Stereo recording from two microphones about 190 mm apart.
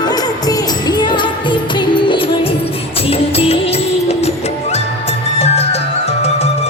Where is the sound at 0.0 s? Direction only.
20° left (ahead or behind).